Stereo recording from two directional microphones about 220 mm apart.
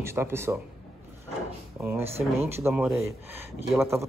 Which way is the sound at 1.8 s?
5° right (ahead or behind).